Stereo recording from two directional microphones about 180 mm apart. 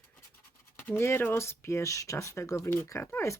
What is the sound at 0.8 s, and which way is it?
Speech, 10° left (ahead or behind).